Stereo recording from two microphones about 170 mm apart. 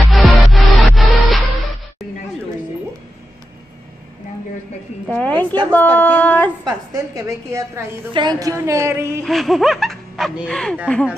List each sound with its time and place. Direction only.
0.1 s music: centre (ahead or behind)
5.0 s a sound: 10° left (ahead or behind)
6.6 s a woman's voice: 20° right (ahead or behind)
9.2 s speech: centre (ahead or behind)